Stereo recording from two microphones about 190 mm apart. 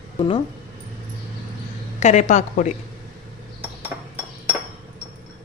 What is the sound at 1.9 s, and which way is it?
Speech, 40° left (ahead or behind).